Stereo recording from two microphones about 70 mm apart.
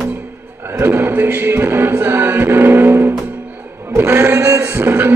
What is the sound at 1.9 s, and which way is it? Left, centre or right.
Music, right.